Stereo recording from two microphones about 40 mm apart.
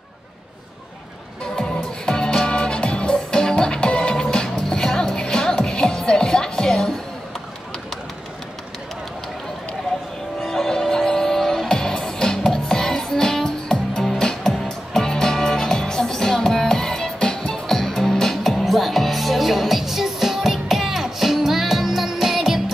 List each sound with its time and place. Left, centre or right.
1.4 s music: centre
10.4 s music: centre
17.6 s music: centre